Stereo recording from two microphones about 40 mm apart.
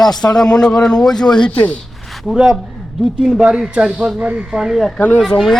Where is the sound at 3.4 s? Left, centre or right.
Centre.